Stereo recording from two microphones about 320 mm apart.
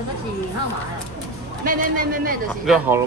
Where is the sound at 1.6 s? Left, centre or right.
Right.